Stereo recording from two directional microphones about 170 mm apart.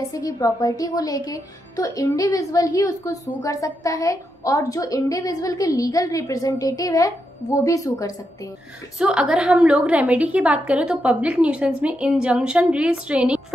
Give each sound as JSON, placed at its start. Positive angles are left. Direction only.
{"t": 0.1, "sound": "a woman's voice", "side_deg": 20}
{"t": 8.9, "sound": "a woman's voice", "side_deg": -5}